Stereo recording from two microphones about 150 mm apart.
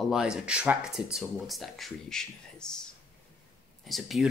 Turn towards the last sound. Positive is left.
turn(degrees=0)  # may be behind; listen again after turning